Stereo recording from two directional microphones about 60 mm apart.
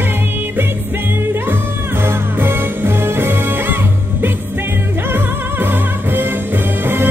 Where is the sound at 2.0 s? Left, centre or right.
Right.